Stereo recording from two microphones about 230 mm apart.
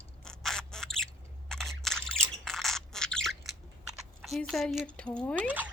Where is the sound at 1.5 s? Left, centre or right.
Centre.